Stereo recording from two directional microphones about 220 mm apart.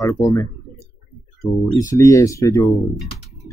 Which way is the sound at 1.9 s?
15° left (ahead or behind).